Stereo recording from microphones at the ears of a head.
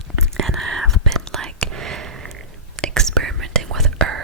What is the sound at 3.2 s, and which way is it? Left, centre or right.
Whispering, right.